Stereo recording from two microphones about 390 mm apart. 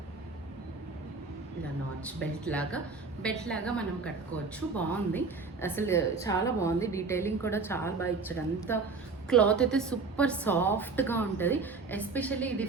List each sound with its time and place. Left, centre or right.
2.4 s a woman's voice: centre